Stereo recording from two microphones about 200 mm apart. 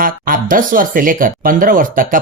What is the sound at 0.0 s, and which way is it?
Speech, 45° right (ahead or behind).